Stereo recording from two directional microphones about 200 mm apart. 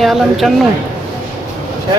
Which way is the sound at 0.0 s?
Centre (ahead or behind).